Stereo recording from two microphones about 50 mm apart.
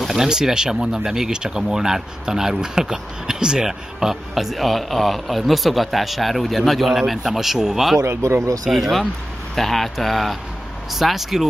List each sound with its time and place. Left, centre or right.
0.0 s speech: centre
8.2 s speech: right
8.6 s speech: centre